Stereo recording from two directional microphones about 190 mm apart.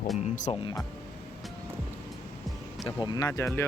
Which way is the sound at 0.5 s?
30° left (ahead or behind).